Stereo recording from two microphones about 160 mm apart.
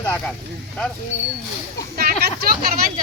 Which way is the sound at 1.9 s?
75° right (ahead or behind).